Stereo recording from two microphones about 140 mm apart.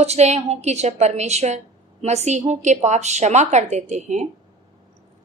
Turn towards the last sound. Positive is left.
turn(degrees=-55)  # may be behind; listen again after turning